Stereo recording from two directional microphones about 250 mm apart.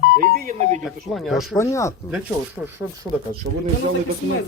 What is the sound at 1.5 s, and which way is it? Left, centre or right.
Speech, centre.